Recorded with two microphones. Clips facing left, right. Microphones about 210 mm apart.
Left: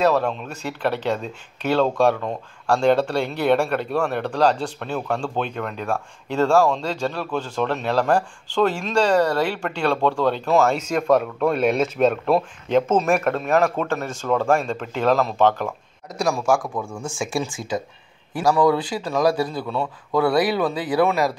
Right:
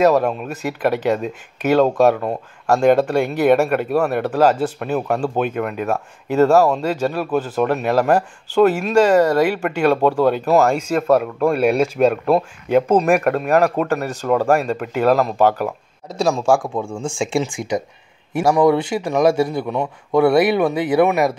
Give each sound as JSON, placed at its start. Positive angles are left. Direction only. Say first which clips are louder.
{"t": 0.0, "sound": "speech", "louder": "right 4 dB", "side_deg": -10}
{"t": 3.3, "sound": "speech", "louder": "right 4 dB", "side_deg": -10}
{"t": 16.2, "sound": "a man's voice", "louder": "right 4 dB", "side_deg": -25}